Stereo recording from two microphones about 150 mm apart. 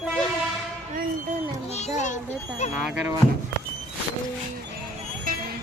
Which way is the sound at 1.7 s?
55° left (ahead or behind).